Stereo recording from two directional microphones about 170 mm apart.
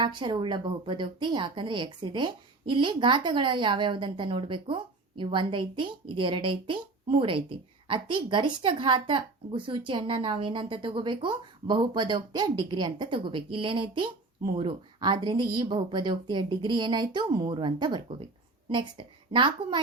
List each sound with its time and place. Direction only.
0.0 s speech: 25° right (ahead or behind)